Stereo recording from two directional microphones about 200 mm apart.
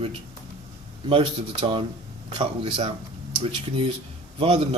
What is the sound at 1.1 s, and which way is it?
Speech, 25° right (ahead or behind).